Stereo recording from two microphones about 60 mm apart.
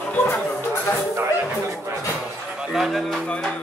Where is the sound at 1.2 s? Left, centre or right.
Right.